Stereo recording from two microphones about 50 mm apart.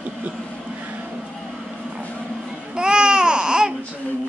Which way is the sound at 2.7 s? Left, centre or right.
Centre.